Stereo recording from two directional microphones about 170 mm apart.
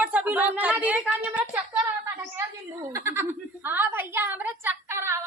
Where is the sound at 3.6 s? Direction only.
10° right (ahead or behind).